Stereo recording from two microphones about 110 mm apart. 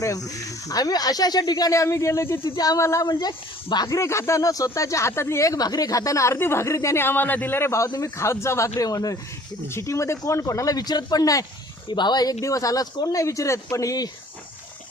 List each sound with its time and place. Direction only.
0.3 s speech: 30° left (ahead or behind)
2.4 s speech: 35° left (ahead or behind)
3.1 s speech: 40° left (ahead or behind)